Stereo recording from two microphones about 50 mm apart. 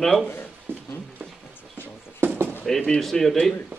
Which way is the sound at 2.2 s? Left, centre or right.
Right.